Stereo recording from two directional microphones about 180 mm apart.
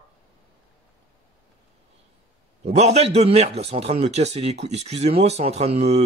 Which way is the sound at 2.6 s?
35° right (ahead or behind).